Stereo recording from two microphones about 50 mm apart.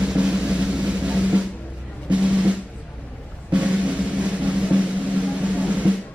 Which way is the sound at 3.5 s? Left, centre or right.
Right.